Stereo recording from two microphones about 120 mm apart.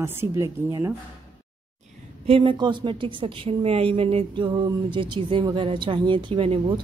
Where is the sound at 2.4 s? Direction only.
40° right (ahead or behind).